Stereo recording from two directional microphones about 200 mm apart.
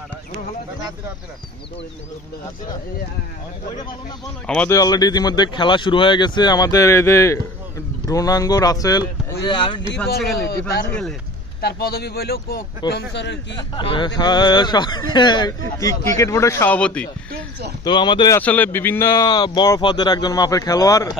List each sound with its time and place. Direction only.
4.5 s speech: 5° left (ahead or behind)
4.7 s speech: 20° left (ahead or behind)
10.9 s speech: 5° left (ahead or behind)
11.6 s a man's voice: 50° left (ahead or behind)
13.6 s speech: 25° left (ahead or behind); by 17.1 s 5° left (ahead or behind)
17.8 s speech: 20° left (ahead or behind)
18.4 s speech: 10° left (ahead or behind)
19.2 s speech: 20° left (ahead or behind)